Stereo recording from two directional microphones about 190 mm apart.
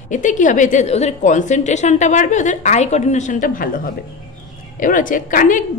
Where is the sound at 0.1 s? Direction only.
40° left (ahead or behind).